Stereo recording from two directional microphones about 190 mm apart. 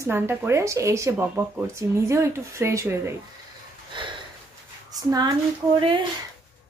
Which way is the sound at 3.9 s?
25° right (ahead or behind).